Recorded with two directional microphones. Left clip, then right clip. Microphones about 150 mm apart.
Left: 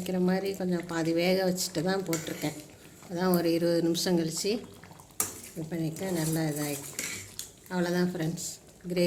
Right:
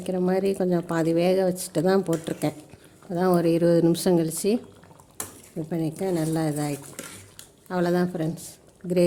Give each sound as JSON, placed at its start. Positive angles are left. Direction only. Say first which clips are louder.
{"t": 0.3, "sound": "speech", "louder": "right 10 dB", "side_deg": -55}
{"t": 5.7, "sound": "speech", "louder": "right 6 dB", "side_deg": -70}
{"t": 7.7, "sound": "speech", "louder": "right 6 dB", "side_deg": -80}
{"t": 8.1, "sound": "speech", "louder": "right 4 dB", "side_deg": -45}